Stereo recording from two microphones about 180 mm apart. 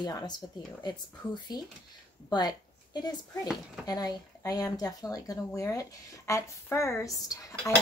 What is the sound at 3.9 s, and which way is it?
A woman's voice, 20° left (ahead or behind).